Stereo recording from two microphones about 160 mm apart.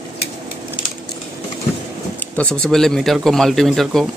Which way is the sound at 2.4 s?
5° left (ahead or behind).